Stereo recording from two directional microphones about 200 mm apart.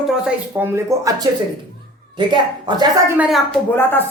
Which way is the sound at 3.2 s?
Centre (ahead or behind).